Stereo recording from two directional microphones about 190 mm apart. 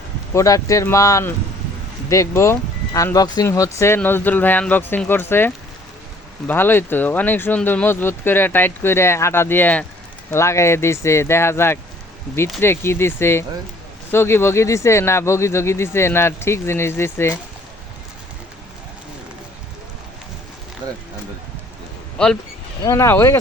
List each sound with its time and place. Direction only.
0.3 s speech: 15° left (ahead or behind)
6.5 s speech: 10° left (ahead or behind)
22.8 s speech: 15° left (ahead or behind)